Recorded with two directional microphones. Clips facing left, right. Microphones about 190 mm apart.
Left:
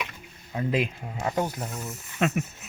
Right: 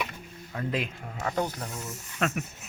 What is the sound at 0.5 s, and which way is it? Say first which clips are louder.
Speech: left 5 dB; 15° left (ahead or behind).